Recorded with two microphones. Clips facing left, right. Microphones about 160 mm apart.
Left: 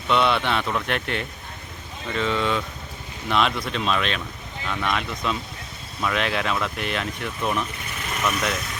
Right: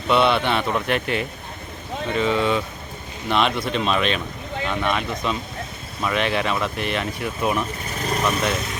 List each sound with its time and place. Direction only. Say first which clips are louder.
0.1 s speech: right 3 dB; centre (ahead or behind)
7.9 s vehicle: right 4 dB; 35° right (ahead or behind)